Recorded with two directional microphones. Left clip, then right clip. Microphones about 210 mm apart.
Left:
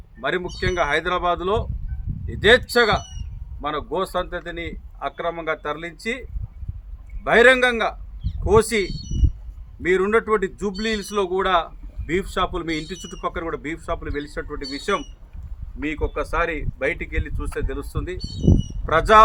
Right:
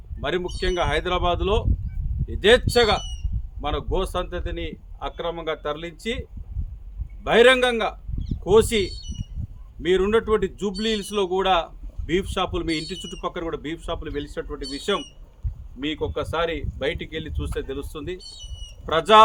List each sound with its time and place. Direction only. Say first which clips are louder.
0.2 s a man's voice: left 2 dB; 5° right (ahead or behind)
7.3 s a man's voice: left 2 dB; 5° right (ahead or behind)